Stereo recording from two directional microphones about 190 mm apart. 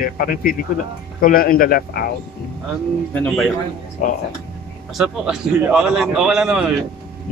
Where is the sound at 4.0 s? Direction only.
45° left (ahead or behind).